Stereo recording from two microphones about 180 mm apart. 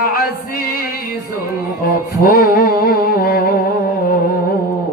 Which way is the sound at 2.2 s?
55° left (ahead or behind).